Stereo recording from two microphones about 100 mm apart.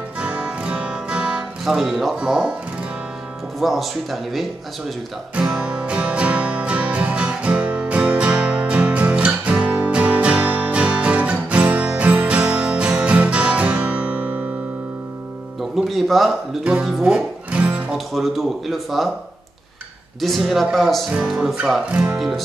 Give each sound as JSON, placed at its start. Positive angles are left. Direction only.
{"t": 0.2, "sound": "music", "side_deg": -10}
{"t": 3.5, "sound": "music", "side_deg": 0}
{"t": 15.7, "sound": "speech", "side_deg": 0}
{"t": 17.9, "sound": "music", "side_deg": 0}
{"t": 20.2, "sound": "music", "side_deg": 0}